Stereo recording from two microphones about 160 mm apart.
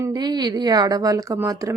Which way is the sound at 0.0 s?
25° right (ahead or behind).